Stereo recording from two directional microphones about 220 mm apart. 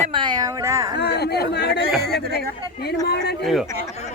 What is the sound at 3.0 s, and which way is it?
Speech, 50° left (ahead or behind).